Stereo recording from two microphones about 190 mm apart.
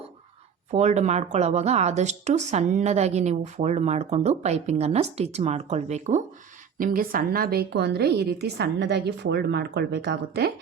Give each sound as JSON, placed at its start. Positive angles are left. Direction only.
{"t": 0.7, "sound": "speech", "side_deg": -35}
{"t": 6.7, "sound": "a woman's voice", "side_deg": -45}